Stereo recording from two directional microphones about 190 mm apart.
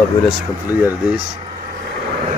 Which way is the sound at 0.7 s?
10° right (ahead or behind).